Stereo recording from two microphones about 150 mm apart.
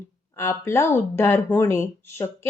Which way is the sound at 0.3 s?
15° left (ahead or behind).